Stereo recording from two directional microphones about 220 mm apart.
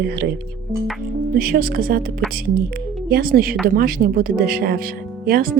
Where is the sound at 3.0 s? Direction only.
45° right (ahead or behind).